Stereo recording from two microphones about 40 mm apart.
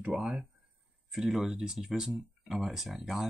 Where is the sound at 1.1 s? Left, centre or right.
Centre.